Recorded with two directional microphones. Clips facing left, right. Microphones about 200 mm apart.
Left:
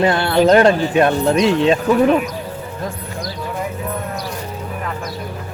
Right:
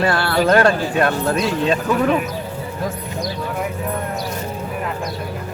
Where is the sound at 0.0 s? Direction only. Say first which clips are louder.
Left 4 dB; 20° left (ahead or behind).